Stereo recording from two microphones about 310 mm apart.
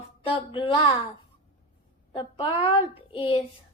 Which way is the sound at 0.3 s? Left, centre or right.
Centre.